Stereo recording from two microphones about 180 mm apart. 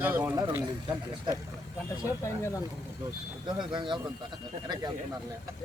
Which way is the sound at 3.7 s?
25° right (ahead or behind).